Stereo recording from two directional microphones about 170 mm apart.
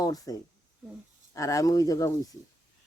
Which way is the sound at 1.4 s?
20° left (ahead or behind).